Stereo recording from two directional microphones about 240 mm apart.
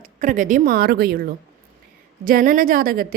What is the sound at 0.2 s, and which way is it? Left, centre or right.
A woman's voice, right.